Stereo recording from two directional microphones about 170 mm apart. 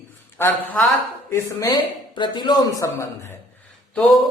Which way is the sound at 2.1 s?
25° left (ahead or behind).